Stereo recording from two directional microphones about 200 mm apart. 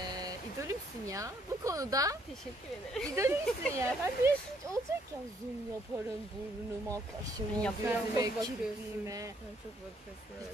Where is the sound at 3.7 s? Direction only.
15° right (ahead or behind).